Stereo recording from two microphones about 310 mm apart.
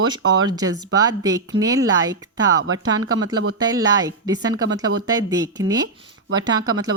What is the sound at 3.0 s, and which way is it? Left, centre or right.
Speech, right.